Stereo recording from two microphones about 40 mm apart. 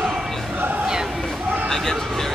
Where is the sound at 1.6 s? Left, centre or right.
Centre.